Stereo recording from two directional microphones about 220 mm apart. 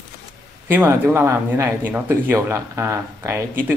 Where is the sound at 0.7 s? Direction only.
10° right (ahead or behind).